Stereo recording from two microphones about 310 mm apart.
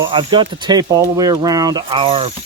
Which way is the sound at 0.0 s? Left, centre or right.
Centre.